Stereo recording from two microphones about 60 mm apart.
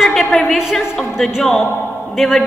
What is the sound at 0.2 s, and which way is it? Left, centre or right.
Speech, centre.